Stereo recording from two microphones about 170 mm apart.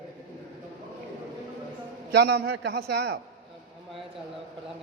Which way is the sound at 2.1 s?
80° right.